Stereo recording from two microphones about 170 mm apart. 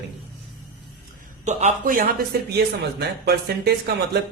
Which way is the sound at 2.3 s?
65° right (ahead or behind).